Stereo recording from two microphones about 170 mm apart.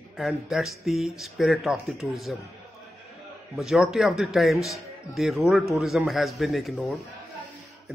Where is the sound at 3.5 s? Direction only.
Centre (ahead or behind).